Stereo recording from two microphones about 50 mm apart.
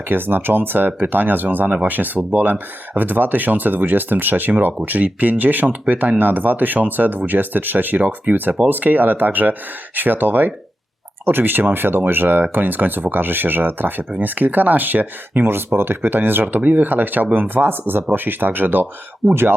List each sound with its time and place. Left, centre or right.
0.1 s speech: right
19.2 s speech: right